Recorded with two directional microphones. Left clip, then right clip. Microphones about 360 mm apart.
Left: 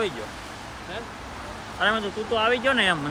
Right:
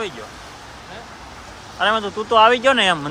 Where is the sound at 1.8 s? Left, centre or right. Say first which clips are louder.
Right 5 dB; centre.